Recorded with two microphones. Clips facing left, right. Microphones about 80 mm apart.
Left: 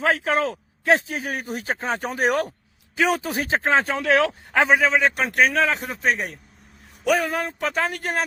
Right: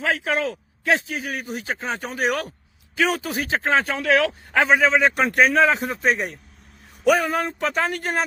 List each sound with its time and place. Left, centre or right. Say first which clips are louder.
0.0 s speech: left 2 dB; left
2.9 s a man's voice: left 1 dB; centre
3.3 s speech: left 1 dB; left
4.7 s speech: right 2 dB; centre